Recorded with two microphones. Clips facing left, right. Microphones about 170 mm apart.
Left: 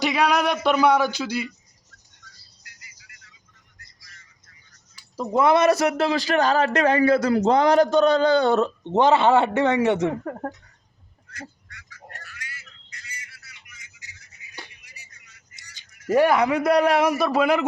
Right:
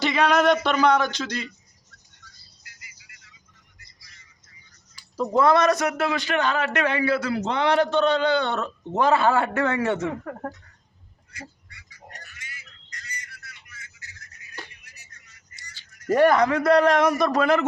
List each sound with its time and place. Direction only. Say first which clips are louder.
0.0 s a man's voice: right 1 dB; 10° left (ahead or behind)
5.1 s a man's voice: even; 20° left (ahead or behind)
11.3 s duck: left 2 dB; 10° right (ahead or behind)
12.9 s bird: right 3 dB; 10° left (ahead or behind)
14.5 s music: right 1 dB; 10° left (ahead or behind)
15.6 s a sound: right 4 dB; 15° left (ahead or behind)
15.9 s a man's voice: even; 5° left (ahead or behind)